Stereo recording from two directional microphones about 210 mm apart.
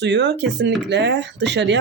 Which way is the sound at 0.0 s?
55° right (ahead or behind).